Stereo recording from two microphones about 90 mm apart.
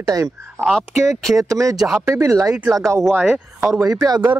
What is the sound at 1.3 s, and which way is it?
Speech, 40° right (ahead or behind).